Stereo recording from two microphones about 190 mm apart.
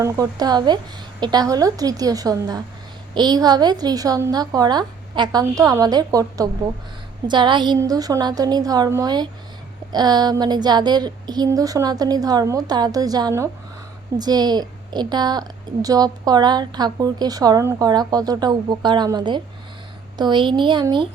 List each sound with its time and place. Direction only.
0.0 s a woman's voice: 20° right (ahead or behind)